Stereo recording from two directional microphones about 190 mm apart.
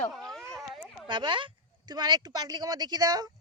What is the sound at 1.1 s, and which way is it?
Speech, 25° right (ahead or behind).